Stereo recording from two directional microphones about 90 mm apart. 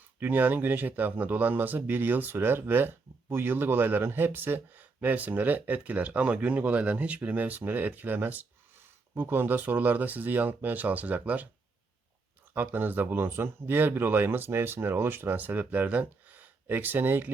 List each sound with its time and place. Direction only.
0.2 s a man's voice: 20° right (ahead or behind)
12.5 s a man's voice: 20° right (ahead or behind)